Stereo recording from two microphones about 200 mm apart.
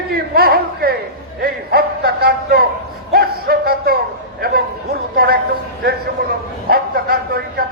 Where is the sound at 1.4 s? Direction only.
50° right (ahead or behind).